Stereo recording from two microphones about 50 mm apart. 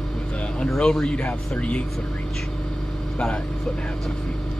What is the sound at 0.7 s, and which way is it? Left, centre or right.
Speech, centre.